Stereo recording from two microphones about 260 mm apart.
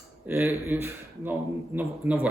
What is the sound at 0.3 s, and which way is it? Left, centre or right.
A man's voice, centre.